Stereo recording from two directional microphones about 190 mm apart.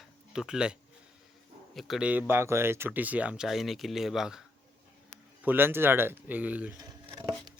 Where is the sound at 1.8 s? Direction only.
Centre (ahead or behind).